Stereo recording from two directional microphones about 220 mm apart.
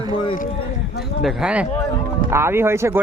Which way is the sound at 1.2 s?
Centre (ahead or behind).